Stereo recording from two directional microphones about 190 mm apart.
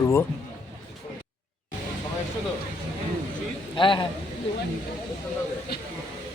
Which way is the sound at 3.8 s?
25° left (ahead or behind).